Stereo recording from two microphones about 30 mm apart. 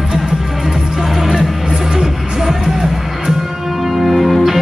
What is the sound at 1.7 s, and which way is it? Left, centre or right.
Music, centre.